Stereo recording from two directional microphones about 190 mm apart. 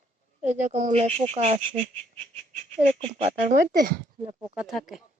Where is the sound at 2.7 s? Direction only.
40° right (ahead or behind).